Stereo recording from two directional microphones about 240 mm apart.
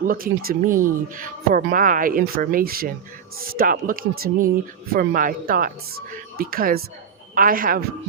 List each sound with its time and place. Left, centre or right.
0.0 s speech: right